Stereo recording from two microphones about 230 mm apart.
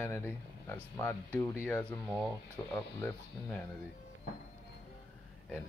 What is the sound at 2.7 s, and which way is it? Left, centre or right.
Speech, centre.